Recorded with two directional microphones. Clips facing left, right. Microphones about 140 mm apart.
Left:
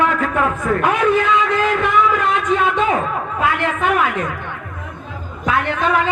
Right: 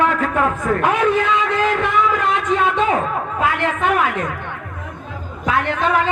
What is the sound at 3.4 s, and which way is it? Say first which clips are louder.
Speech: left 1 dB; 40° right (ahead or behind).